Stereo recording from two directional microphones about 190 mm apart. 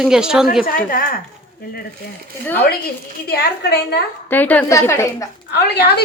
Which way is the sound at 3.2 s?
55° left (ahead or behind).